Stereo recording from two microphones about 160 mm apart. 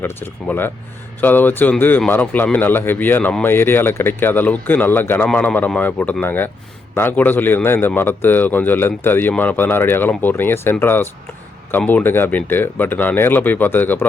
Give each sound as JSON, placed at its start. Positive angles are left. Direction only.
{"t": 0.0, "sound": "a man's voice", "side_deg": 15}